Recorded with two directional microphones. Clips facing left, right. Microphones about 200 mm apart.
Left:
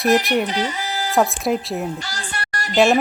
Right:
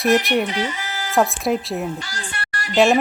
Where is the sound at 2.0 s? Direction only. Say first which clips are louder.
Left 1 dB; 40° left (ahead or behind).